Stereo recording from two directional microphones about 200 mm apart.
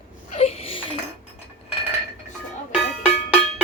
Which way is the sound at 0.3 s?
30° left (ahead or behind).